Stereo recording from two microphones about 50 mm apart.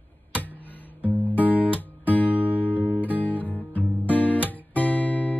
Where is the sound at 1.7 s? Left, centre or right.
Left.